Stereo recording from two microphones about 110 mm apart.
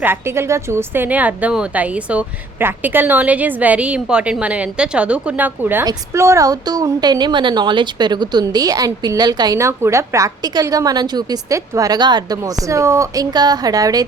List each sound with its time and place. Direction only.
0.0 s a woman's voice: 20° right (ahead or behind)
5.8 s speech: 30° right (ahead or behind)
9.6 s speech: 25° right (ahead or behind)
12.6 s speech: 25° right (ahead or behind)